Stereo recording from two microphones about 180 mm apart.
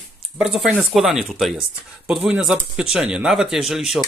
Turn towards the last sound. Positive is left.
turn(degrees=0)  # may be behind; listen again after turning